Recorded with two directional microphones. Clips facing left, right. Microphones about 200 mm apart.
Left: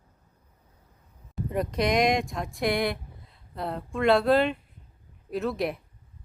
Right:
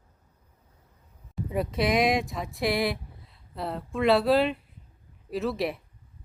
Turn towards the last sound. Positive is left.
turn(degrees=0)  # may be behind; listen again after turning